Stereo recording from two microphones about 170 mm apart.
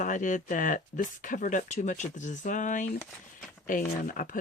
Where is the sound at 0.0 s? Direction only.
50° left (ahead or behind).